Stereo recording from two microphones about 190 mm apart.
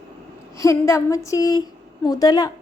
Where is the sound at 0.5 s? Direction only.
15° left (ahead or behind).